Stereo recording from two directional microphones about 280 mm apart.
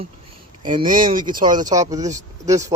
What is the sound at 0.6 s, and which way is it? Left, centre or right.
Speech, centre.